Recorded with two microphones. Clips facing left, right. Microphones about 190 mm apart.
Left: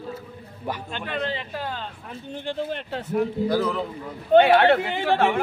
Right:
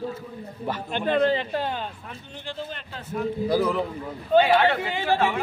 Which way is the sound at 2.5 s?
65° left (ahead or behind).